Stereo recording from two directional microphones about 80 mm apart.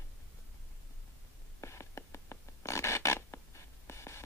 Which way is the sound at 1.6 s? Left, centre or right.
Left.